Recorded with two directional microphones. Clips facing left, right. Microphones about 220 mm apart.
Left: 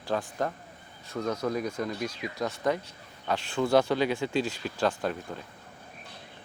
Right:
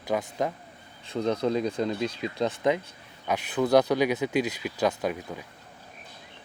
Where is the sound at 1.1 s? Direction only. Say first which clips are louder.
Right 4 dB; 30° right (ahead or behind).